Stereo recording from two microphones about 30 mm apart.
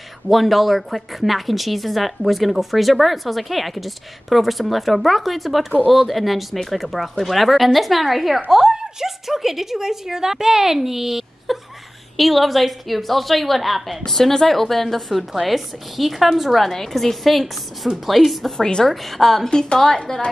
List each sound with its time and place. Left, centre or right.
0.3 s a woman's voice: centre
12.2 s a woman's voice: centre
14.0 s a woman's voice: centre
16.6 s a woman's voice: centre
18.6 s a woman's voice: left
18.9 s a woman's voice: centre
19.4 s a woman's voice: left